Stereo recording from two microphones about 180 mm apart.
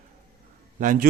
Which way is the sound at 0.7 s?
50° right (ahead or behind).